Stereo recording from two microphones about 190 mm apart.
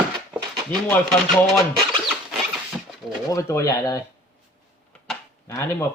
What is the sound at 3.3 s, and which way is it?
Speech, 15° left (ahead or behind).